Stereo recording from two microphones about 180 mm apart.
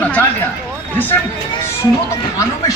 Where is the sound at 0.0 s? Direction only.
10° left (ahead or behind).